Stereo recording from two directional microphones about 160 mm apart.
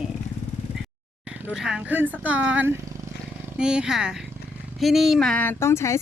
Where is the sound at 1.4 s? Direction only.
5° right (ahead or behind); by 5.9 s 15° left (ahead or behind).